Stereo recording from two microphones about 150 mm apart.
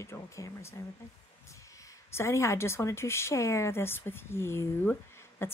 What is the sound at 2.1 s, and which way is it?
Speech, 15° left (ahead or behind).